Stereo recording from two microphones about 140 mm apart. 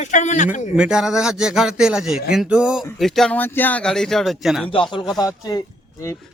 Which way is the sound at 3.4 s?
15° left (ahead or behind).